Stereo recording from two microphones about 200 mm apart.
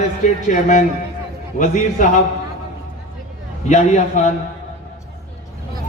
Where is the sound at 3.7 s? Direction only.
35° left (ahead or behind).